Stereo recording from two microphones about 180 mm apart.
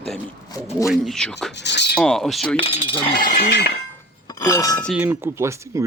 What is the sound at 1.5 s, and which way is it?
Speech, 75° left (ahead or behind).